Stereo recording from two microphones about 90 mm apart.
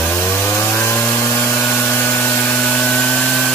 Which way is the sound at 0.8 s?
25° left (ahead or behind).